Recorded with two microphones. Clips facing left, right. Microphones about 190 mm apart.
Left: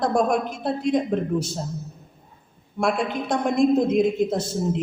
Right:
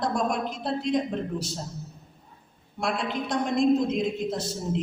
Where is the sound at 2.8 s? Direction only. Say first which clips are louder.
Left 5 dB; 50° left (ahead or behind).